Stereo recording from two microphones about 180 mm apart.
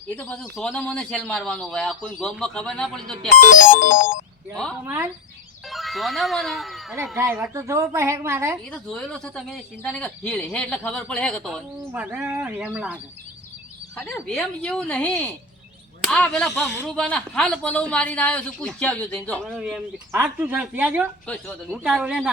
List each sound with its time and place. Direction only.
0.2 s speech: 5° left (ahead or behind)
3.2 s music: 45° left (ahead or behind)
4.5 s speech: 5° left (ahead or behind)
4.9 s speech: 15° right (ahead or behind)
5.7 s speech: centre (ahead or behind)
7.2 s speech: 15° right (ahead or behind)
8.7 s speech: 5° left (ahead or behind)
11.9 s speech: 10° right (ahead or behind)
13.9 s a man's voice: 10° left (ahead or behind)
19.5 s speech: 5° right (ahead or behind)